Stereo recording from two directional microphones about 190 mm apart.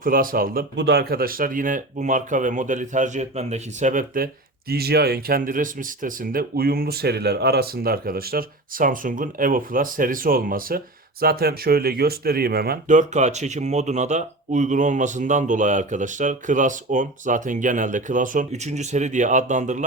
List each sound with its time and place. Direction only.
0.0 s speech: 50° right (ahead or behind)